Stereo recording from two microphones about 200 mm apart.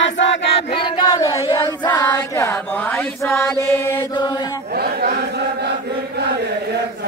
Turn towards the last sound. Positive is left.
turn(degrees=-50)  # may be behind; listen again after turning